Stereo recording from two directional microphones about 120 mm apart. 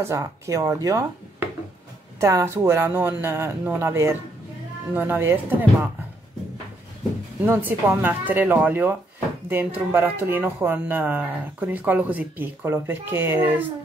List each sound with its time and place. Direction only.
0.0 s speech: 25° right (ahead or behind)
2.1 s speech: 25° right (ahead or behind)
7.4 s speech: 20° right (ahead or behind)